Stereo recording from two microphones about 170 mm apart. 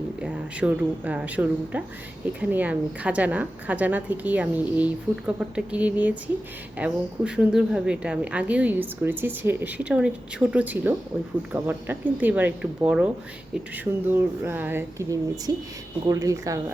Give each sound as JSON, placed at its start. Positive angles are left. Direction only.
{"t": 0.2, "sound": "a woman's voice", "side_deg": -5}